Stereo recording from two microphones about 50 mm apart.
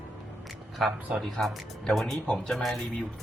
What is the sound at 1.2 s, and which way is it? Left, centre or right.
Speech, centre.